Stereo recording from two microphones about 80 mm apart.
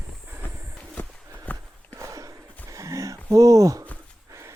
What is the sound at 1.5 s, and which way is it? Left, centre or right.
Horse, left.